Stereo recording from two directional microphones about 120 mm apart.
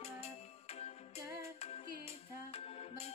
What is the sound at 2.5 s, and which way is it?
Music, 55° left (ahead or behind).